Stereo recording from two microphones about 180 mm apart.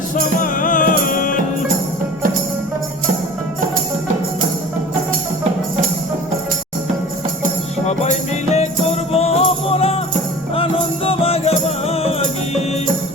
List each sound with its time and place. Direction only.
0.2 s music: 50° left (ahead or behind)
7.9 s music: 35° left (ahead or behind)